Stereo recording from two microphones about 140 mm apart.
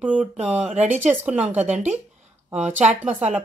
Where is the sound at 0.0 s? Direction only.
10° right (ahead or behind).